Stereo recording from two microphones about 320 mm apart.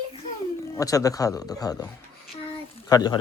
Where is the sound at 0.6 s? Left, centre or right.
Centre.